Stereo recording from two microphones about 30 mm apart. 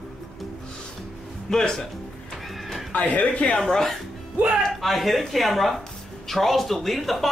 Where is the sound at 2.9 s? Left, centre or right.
Left.